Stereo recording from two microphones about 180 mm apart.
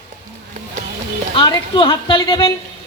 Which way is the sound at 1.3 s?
25° left (ahead or behind).